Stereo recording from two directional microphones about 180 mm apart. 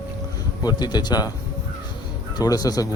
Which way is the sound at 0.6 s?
25° left (ahead or behind).